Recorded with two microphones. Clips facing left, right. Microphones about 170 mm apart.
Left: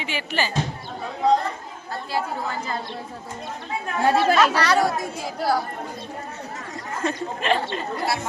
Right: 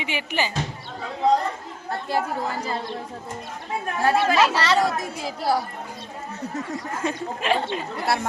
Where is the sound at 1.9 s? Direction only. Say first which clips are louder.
Right 2 dB; 50° right (ahead or behind).